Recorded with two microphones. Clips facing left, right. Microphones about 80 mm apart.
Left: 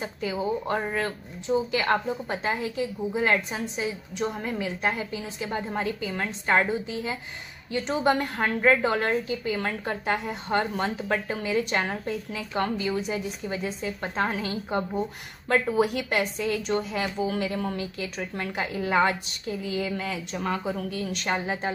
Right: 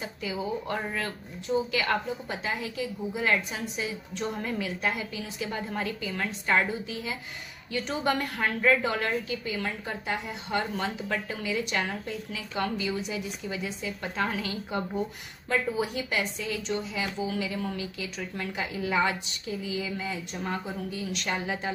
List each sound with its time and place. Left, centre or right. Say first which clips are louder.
0.0 s a woman's voice: left 4 dB; left
4.2 s a woman's voice: left 3 dB; centre
15.4 s a woman's voice: left 5 dB; left
20.0 s a woman's voice: left 3 dB; left
21.0 s a woman's voice: left 2 dB; left